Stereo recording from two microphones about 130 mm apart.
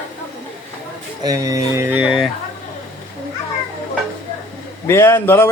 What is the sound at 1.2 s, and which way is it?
Speech, 25° right (ahead or behind).